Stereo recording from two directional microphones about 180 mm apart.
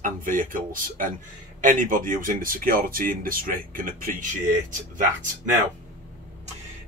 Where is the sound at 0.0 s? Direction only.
50° right (ahead or behind).